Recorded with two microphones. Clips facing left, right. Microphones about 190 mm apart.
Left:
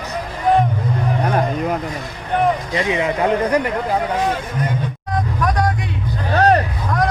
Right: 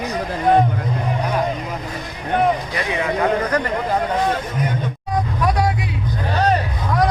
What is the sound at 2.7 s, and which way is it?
Speech, 20° left (ahead or behind).